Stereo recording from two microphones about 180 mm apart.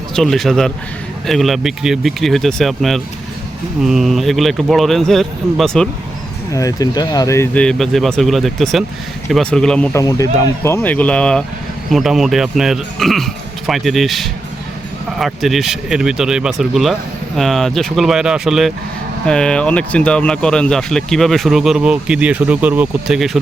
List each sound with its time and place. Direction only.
0.2 s speech: centre (ahead or behind)
6.5 s speech: 20° left (ahead or behind)
10.0 s speech: 20° left (ahead or behind); by 23.4 s centre (ahead or behind)